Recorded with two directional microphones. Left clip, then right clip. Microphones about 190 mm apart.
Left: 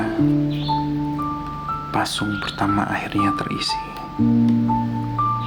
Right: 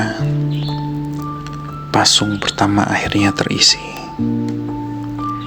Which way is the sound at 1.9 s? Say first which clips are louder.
Right 11 dB; 35° right (ahead or behind).